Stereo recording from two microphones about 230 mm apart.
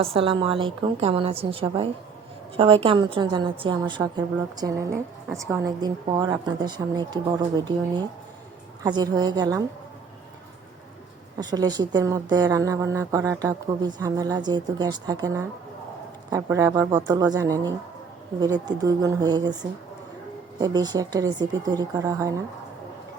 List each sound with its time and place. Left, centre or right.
0.0 s a woman's voice: right
11.3 s a woman's voice: centre
20.6 s a woman's voice: centre